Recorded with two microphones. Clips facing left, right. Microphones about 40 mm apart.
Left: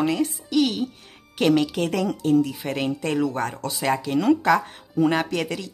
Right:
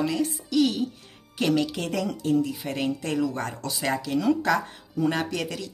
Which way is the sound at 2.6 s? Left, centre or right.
Left.